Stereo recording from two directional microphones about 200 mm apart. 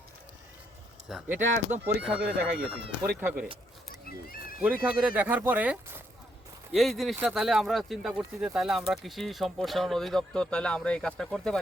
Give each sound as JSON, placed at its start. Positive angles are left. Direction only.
{"t": 1.0, "sound": "speech", "side_deg": 0}
{"t": 4.3, "sound": "a sound", "side_deg": 45}
{"t": 4.6, "sound": "speech", "side_deg": -5}